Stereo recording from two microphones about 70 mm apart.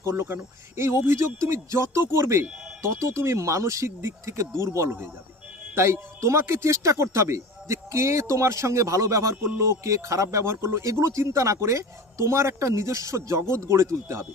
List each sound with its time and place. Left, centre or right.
0.0 s speech: right